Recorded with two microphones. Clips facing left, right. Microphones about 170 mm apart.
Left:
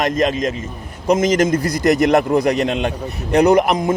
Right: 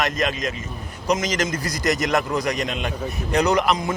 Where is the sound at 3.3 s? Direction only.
55° left (ahead or behind).